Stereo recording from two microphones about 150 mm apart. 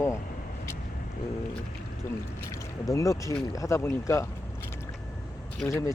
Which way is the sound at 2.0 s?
20° left (ahead or behind).